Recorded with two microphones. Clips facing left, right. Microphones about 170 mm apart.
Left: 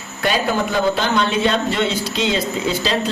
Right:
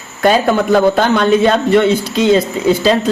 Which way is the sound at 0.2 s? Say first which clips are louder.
Right 7 dB; 50° right (ahead or behind).